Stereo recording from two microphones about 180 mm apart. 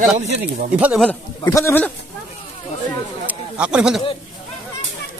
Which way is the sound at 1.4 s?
15° left (ahead or behind).